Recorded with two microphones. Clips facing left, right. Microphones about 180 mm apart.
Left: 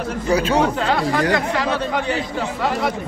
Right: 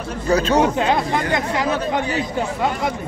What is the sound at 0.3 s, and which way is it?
Speech, 10° left (ahead or behind).